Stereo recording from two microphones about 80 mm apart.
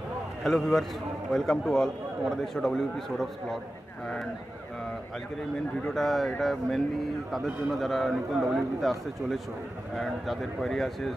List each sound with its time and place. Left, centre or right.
0.4 s a man's voice: centre
5.9 s a man's voice: centre